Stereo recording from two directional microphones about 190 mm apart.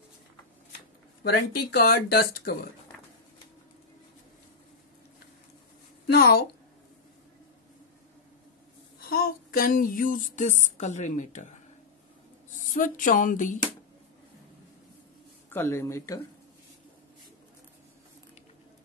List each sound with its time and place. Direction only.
1.2 s speech: 55° left (ahead or behind)
6.0 s a sound: 55° left (ahead or behind)
9.1 s female singing: 50° left (ahead or behind)
10.6 s a woman's voice: 40° left (ahead or behind)
12.6 s a sound: 45° left (ahead or behind)
15.5 s speech: 10° left (ahead or behind)